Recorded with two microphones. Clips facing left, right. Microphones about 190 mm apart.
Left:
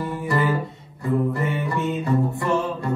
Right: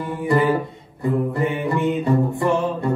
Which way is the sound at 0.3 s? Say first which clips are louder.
Right 6 dB; 20° right (ahead or behind).